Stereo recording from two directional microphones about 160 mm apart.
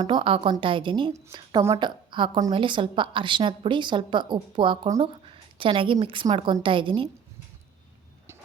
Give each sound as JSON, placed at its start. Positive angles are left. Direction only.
{"t": 0.0, "sound": "a woman's voice", "side_deg": -30}